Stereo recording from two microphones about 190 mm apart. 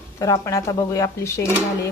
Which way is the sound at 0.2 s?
15° left (ahead or behind).